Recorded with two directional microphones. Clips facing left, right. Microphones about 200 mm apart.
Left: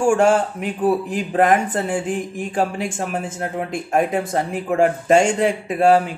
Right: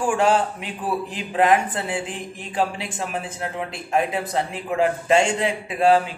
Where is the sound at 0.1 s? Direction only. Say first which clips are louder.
Left 4 dB; 45° left (ahead or behind).